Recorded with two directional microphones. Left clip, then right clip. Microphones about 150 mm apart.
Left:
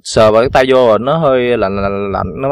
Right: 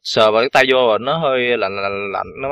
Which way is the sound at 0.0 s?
40° left (ahead or behind).